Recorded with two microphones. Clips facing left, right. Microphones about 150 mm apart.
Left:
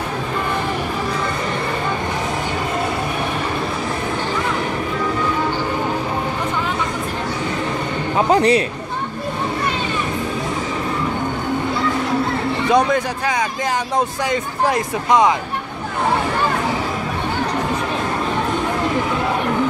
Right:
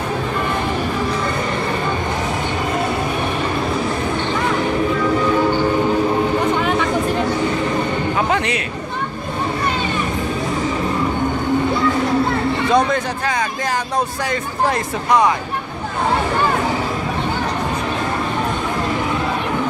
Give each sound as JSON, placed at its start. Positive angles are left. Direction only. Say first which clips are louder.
{"t": 8.3, "sound": "chatter", "louder": "left 6 dB", "side_deg": 35}
{"t": 12.7, "sound": "speech", "louder": "left 2 dB", "side_deg": 15}